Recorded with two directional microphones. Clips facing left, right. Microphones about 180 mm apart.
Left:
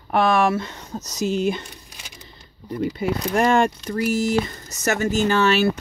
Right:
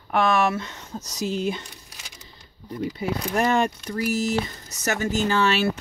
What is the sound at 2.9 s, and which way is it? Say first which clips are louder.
Speech: left 3 dB; 70° left (ahead or behind).